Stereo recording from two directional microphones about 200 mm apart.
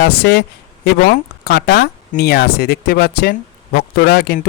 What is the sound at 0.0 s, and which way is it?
Speech, 55° left (ahead or behind).